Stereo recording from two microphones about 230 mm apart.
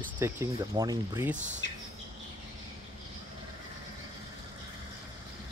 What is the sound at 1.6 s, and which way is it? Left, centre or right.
Bird, left.